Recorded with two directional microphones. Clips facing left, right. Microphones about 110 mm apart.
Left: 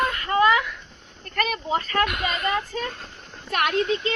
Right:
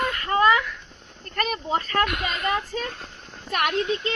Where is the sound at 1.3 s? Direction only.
40° right (ahead or behind).